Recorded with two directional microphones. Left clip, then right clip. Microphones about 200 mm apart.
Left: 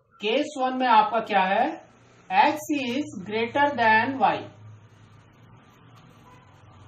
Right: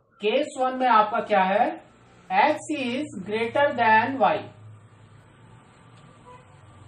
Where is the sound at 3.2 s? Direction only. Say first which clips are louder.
Right 1 dB; 10° right (ahead or behind).